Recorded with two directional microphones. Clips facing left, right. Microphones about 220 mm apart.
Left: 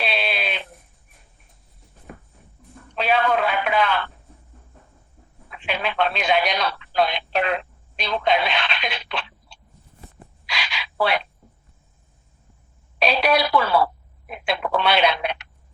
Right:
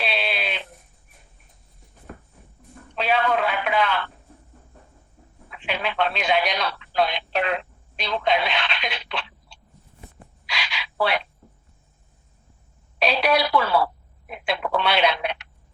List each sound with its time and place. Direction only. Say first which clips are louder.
0.0 s sheep: left 1 dB; 45° left (ahead or behind)
3.0 s a sound: left 1 dB; 45° left (ahead or behind)
5.6 s radio: left 1 dB; 45° left (ahead or behind)
10.4 s frog: left 1 dB; 45° left (ahead or behind)
13.0 s telephone: left 1 dB; 45° left (ahead or behind)